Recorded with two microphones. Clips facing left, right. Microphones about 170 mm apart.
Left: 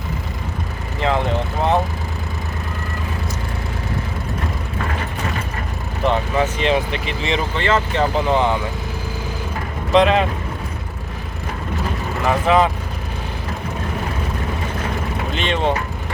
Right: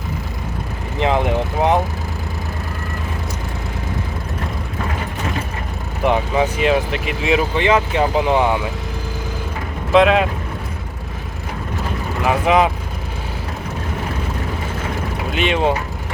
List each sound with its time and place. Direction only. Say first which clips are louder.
0.9 s vehicle: right 2 dB; 15° right (ahead or behind)
6.0 s speech: right 2 dB; 15° right (ahead or behind)
9.9 s speech: right 2 dB; 5° right (ahead or behind)
12.2 s speech: right 1 dB; 10° right (ahead or behind)
15.3 s speech: right 3 dB; 10° right (ahead or behind)